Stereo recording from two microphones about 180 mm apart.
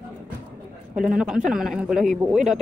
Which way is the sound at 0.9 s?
5° right (ahead or behind).